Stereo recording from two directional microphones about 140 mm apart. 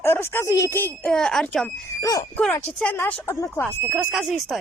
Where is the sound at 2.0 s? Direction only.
25° left (ahead or behind).